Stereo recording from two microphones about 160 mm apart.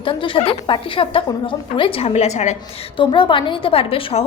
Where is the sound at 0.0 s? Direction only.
30° left (ahead or behind).